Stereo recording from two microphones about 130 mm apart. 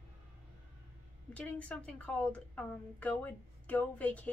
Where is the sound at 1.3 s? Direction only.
10° left (ahead or behind).